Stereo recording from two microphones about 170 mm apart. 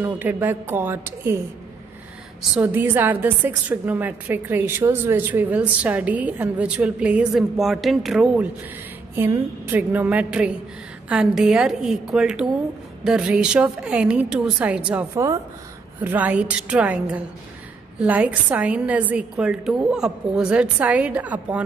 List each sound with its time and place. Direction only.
0.2 s a woman's voice: 10° right (ahead or behind)
2.6 s a woman's voice: 10° right (ahead or behind)
9.1 s a woman's voice: 15° right (ahead or behind)
15.0 s a woman's voice: 20° right (ahead or behind)